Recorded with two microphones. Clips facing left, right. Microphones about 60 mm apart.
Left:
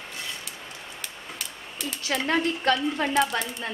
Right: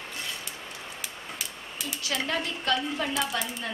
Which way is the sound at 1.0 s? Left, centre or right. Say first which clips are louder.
Left 1 dB; centre.